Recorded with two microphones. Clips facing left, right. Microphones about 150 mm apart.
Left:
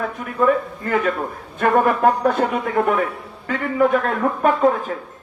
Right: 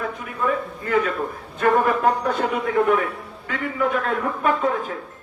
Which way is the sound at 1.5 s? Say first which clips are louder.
Left 2 dB; 50° left (ahead or behind).